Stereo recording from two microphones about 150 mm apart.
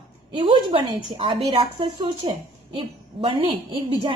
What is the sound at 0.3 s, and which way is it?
A woman's voice, 35° right (ahead or behind).